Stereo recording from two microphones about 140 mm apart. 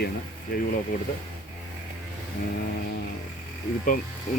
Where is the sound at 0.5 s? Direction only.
90° left.